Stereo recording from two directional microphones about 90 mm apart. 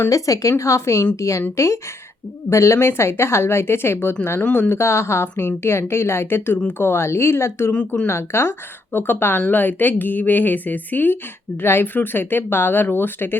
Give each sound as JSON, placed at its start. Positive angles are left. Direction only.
{"t": 0.1, "sound": "a woman's voice", "side_deg": 40}
{"t": 7.7, "sound": "speech", "side_deg": 10}
{"t": 8.0, "sound": "speech", "side_deg": 30}